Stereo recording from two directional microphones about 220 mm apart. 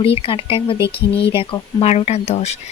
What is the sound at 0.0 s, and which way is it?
Speech, 25° left (ahead or behind).